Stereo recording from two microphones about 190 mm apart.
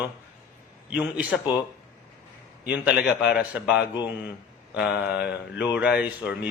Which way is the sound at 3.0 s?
5° right (ahead or behind).